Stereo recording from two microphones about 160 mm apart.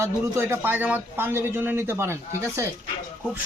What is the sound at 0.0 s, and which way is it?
A man's voice, 15° right (ahead or behind).